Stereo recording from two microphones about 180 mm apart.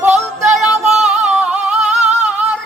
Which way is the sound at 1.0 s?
40° right (ahead or behind).